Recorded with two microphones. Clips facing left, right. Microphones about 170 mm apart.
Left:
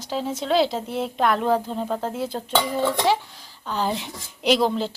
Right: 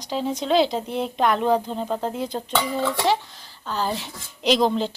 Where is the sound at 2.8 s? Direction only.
20° left (ahead or behind).